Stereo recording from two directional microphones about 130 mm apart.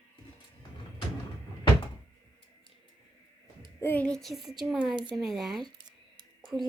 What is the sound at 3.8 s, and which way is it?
A child's voice, 15° left (ahead or behind).